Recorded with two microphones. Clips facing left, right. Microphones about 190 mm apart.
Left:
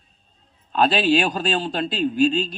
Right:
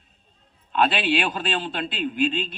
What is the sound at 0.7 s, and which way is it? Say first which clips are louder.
Speech: left 4 dB; 35° left (ahead or behind).